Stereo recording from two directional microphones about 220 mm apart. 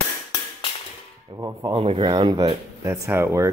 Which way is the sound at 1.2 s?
20° right (ahead or behind).